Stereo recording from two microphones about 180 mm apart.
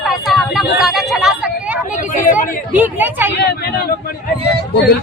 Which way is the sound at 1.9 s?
45° left (ahead or behind).